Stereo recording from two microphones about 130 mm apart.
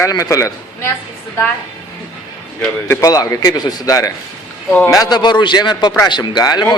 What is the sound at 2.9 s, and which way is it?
A man's voice, 25° left (ahead or behind).